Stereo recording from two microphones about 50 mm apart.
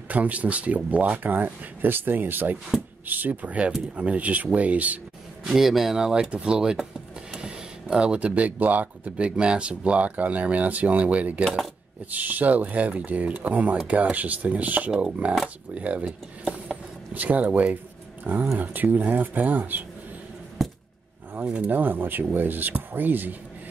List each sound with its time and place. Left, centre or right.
0.1 s speech: right
2.7 s speech: centre
3.1 s speech: right
5.5 s speech: centre; by 11.4 s right
11.4 s speech: centre
12.1 s speech: right
20.6 s a sound: centre
21.6 s speech: right